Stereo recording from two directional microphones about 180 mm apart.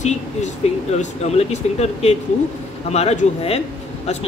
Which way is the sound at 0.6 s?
35° left (ahead or behind).